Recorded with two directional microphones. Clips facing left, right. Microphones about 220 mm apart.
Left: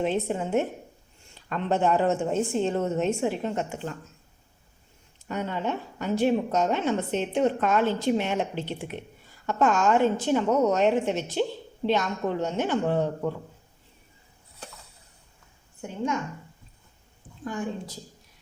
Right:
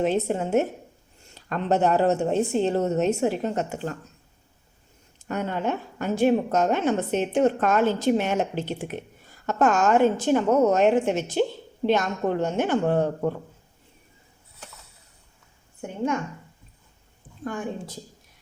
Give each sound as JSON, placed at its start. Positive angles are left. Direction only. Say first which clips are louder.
{"t": 0.0, "sound": "a woman's voice", "louder": "right 3 dB", "side_deg": -40}
{"t": 5.3, "sound": "a woman's voice", "louder": "right 2 dB", "side_deg": -50}
{"t": 15.8, "sound": "a woman's voice", "louder": "right 2 dB", "side_deg": -55}